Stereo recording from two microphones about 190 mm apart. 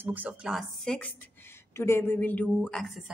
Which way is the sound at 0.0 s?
10° right (ahead or behind).